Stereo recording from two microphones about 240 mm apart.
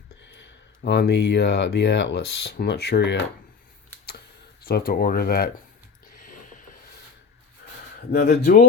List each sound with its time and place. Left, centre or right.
0.8 s speech: left
4.6 s speech: left
6.1 s a sound: left
8.1 s speech: left